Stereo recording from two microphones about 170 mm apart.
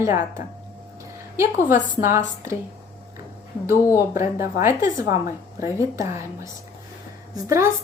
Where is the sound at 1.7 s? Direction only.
55° left (ahead or behind).